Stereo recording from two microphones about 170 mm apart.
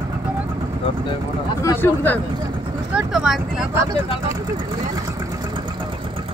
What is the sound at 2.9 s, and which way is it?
Vehicle, 5° right (ahead or behind).